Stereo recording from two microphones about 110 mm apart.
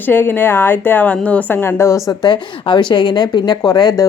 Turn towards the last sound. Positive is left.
turn(degrees=35)  # may be behind; listen again after turning